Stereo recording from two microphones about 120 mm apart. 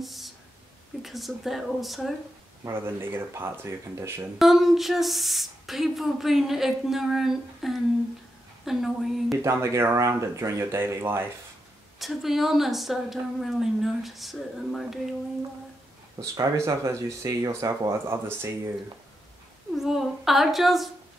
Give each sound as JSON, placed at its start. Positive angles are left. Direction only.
{"t": 0.0, "sound": "a sound", "side_deg": 0}
{"t": 1.0, "sound": "speech", "side_deg": 0}
{"t": 2.6, "sound": "speech", "side_deg": -20}
{"t": 4.4, "sound": "speech", "side_deg": 0}
{"t": 9.4, "sound": "speech", "side_deg": -25}
{"t": 12.0, "sound": "speech", "side_deg": 0}
{"t": 16.2, "sound": "speech", "side_deg": -25}
{"t": 19.7, "sound": "speech", "side_deg": 0}